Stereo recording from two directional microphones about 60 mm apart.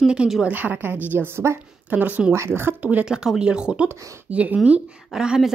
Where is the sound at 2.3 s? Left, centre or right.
Right.